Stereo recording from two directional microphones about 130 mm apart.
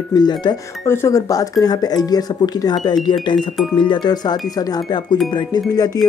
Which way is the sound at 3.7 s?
35° left (ahead or behind).